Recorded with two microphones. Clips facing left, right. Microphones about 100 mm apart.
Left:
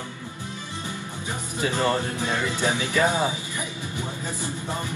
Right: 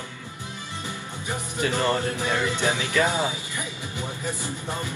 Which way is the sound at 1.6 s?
15° left (ahead or behind).